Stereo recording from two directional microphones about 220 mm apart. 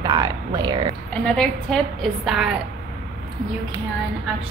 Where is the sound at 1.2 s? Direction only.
Centre (ahead or behind).